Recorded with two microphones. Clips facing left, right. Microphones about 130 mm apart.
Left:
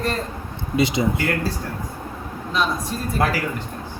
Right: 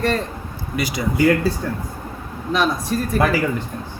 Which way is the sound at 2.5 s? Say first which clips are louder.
Right 4 dB; 70° right (ahead or behind).